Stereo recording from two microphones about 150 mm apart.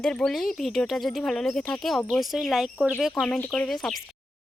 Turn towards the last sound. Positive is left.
turn(degrees=5)  # may be behind; listen again after turning